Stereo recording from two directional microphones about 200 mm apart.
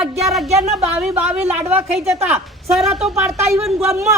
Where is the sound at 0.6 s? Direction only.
35° right (ahead or behind).